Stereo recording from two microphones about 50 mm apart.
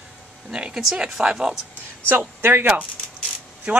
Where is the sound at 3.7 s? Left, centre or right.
Right.